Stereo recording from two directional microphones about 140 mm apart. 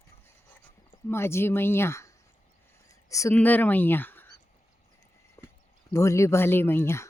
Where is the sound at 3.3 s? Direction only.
10° left (ahead or behind).